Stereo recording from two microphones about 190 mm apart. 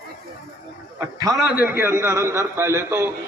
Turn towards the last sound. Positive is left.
turn(degrees=-15)  # may be behind; listen again after turning